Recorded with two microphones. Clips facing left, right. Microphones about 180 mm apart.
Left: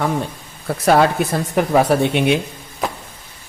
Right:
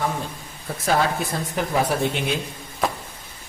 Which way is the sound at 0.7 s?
70° left (ahead or behind).